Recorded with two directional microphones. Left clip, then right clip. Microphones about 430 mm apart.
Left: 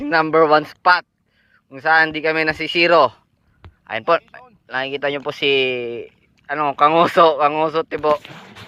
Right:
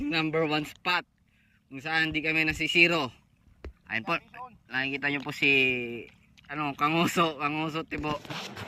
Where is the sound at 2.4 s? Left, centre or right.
Centre.